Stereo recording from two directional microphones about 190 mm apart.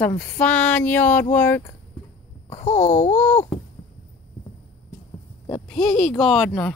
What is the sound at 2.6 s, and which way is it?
Babbling, 40° left (ahead or behind).